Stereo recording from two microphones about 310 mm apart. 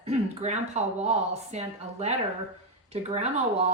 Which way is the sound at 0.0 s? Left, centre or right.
Right.